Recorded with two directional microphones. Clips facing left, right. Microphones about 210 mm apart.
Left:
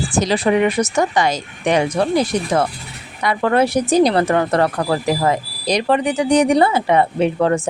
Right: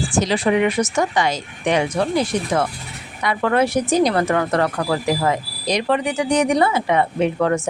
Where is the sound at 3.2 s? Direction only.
35° left (ahead or behind).